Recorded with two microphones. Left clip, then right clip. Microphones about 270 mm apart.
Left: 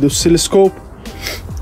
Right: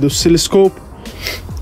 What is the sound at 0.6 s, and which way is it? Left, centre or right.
Music, centre.